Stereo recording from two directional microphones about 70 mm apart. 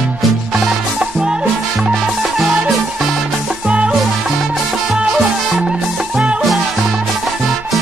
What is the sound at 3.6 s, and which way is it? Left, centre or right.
Music, centre.